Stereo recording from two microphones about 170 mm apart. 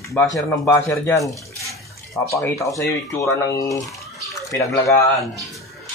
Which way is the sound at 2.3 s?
20° left (ahead or behind).